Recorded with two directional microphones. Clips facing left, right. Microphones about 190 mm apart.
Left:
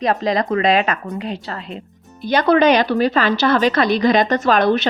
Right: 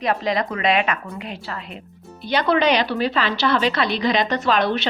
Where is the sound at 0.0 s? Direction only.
40° left (ahead or behind).